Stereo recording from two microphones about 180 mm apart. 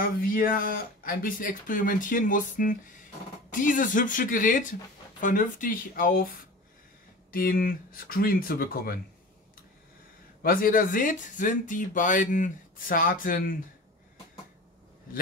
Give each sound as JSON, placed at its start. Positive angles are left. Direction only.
{"t": 0.0, "sound": "speech", "side_deg": 50}
{"t": 7.2, "sound": "speech", "side_deg": 50}
{"t": 10.4, "sound": "speech", "side_deg": 50}